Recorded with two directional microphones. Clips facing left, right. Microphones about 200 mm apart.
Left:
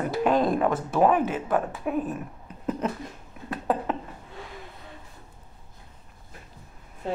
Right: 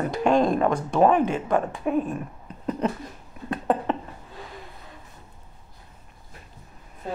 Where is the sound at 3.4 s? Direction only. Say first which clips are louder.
Right 3 dB; centre (ahead or behind).